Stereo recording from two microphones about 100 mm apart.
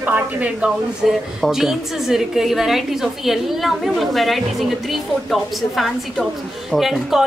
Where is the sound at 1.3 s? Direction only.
5° right (ahead or behind).